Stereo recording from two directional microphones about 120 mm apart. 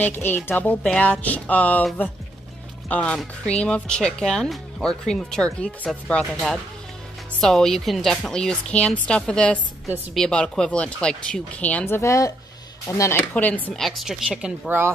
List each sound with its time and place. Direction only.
0.0 s speech: 15° left (ahead or behind)
2.9 s speech: 10° left (ahead or behind); by 13.2 s 25° left (ahead or behind)
13.3 s speech: 15° left (ahead or behind)
13.7 s speech: centre (ahead or behind)